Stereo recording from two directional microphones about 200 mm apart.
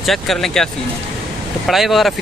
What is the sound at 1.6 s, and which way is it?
Speech, centre (ahead or behind).